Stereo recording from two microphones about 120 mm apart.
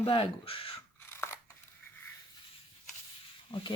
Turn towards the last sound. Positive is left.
turn(degrees=40)  # may be behind; listen again after turning